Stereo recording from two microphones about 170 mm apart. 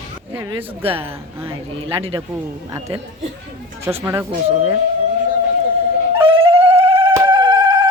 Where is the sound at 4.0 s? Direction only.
15° right (ahead or behind).